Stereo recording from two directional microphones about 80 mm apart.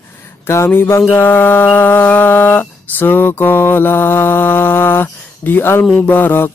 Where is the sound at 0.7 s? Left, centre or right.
Left.